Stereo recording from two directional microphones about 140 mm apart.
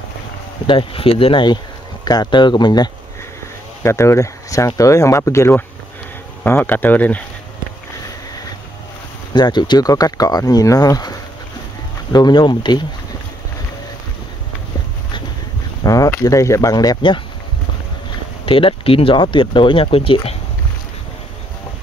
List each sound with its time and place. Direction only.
0.7 s speech: 40° left (ahead or behind)
3.8 s speech: 20° left (ahead or behind)
9.3 s speech: 30° left (ahead or behind)
15.8 s speech: 25° left (ahead or behind)
18.4 s speech: 40° left (ahead or behind)